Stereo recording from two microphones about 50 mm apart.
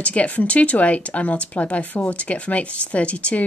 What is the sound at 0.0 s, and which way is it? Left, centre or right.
A woman's voice, left.